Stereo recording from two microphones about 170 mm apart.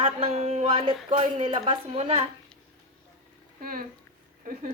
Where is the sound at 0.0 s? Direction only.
35° right (ahead or behind).